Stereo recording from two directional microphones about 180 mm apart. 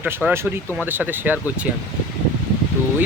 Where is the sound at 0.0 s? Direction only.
5° right (ahead or behind).